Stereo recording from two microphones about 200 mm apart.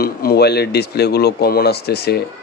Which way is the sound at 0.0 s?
50° left (ahead or behind).